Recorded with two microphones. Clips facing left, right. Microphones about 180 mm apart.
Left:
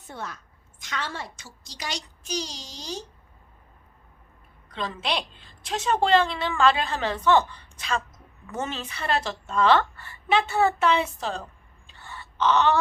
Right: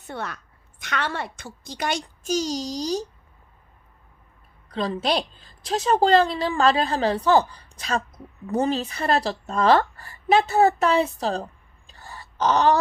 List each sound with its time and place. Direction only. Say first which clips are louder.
0.0 s a woman's voice: right 4 dB; 70° right (ahead or behind); by 3.1 s 40° right (ahead or behind)
4.7 s a woman's voice: right 6 dB; 35° right (ahead or behind)
11.9 s wail: right 1 dB; 40° right (ahead or behind)